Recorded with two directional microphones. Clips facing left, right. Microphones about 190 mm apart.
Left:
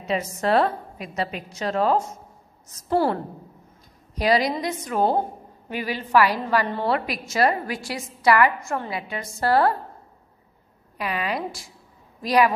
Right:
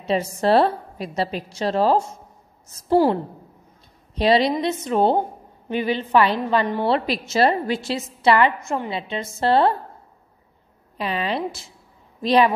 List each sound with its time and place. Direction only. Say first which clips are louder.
0.0 s a woman's voice: right 4 dB; 30° right (ahead or behind)
4.1 s a woman's voice: right 3 dB; 25° right (ahead or behind)
11.0 s a woman's voice: right 3 dB; 30° right (ahead or behind)